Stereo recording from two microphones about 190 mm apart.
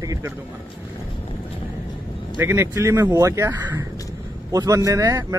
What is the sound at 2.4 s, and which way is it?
A man's voice, 15° right (ahead or behind).